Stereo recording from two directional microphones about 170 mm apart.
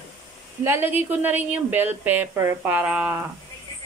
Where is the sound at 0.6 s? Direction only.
15° right (ahead or behind).